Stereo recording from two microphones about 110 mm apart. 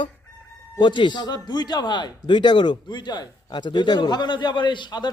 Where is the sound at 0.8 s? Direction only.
45° left (ahead or behind).